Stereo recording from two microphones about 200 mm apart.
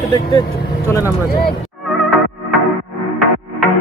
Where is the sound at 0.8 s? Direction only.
15° left (ahead or behind).